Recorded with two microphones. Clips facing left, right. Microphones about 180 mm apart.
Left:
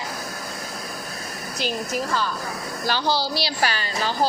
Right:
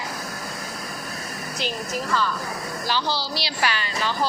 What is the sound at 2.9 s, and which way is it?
A child's voice, 45° left (ahead or behind).